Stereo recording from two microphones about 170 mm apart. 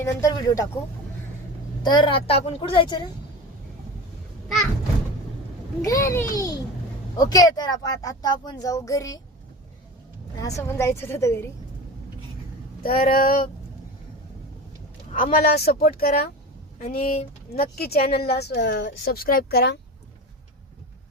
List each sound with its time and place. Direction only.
0.0 s speech: 20° left (ahead or behind)
1.8 s speech: 25° left (ahead or behind)
5.8 s a woman's voice: 20° left (ahead or behind)
10.4 s a woman's voice: 15° left (ahead or behind)
12.8 s a woman's voice: 60° left (ahead or behind)
15.1 s a woman's voice: 60° left (ahead or behind); by 19.8 s 75° left (ahead or behind)